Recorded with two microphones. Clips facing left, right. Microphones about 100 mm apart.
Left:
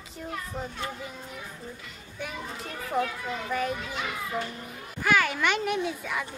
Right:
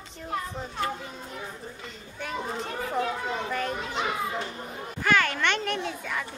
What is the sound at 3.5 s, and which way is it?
Speech, 5° left (ahead or behind).